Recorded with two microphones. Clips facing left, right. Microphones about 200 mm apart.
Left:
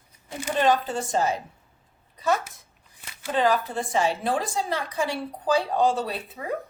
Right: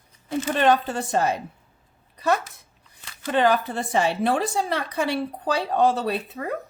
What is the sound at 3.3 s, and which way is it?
A woman's voice, 65° right (ahead or behind).